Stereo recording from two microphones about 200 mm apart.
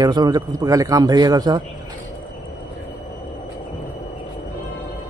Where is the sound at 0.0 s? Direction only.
20° right (ahead or behind).